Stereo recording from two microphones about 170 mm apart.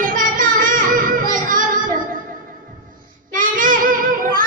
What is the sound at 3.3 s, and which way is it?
Child singing, 50° right (ahead or behind).